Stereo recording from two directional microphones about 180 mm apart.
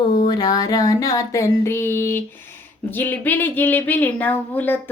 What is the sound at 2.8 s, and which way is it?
Speech, 10° left (ahead or behind).